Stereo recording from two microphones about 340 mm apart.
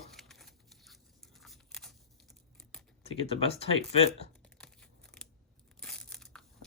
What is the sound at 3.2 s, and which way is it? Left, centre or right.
Speech, centre.